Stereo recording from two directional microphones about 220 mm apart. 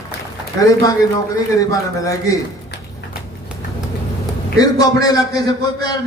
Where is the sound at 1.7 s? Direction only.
15° left (ahead or behind).